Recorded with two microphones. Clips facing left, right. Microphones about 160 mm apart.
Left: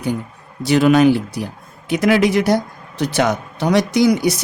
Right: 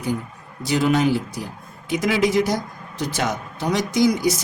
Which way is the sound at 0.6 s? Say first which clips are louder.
Left 7 dB; 70° left (ahead or behind).